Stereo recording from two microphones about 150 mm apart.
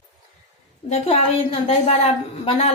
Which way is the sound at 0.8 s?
45° left (ahead or behind).